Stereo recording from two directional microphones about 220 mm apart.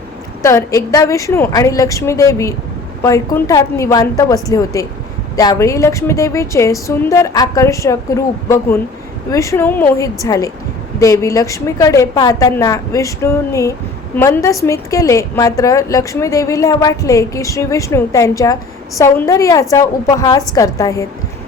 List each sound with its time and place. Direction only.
0.4 s a woman's voice: 15° left (ahead or behind)